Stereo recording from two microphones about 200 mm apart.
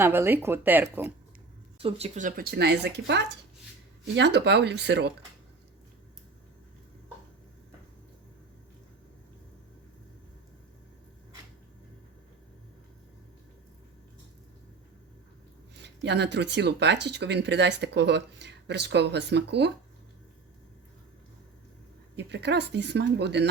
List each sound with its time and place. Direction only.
0.0 s speech: 10° right (ahead or behind)
1.8 s speech: 35° right (ahead or behind); by 5.1 s 60° right (ahead or behind)
15.8 s speech: 55° right (ahead or behind)
22.1 s speech: 60° right (ahead or behind)